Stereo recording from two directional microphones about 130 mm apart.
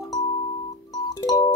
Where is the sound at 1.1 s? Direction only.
25° left (ahead or behind).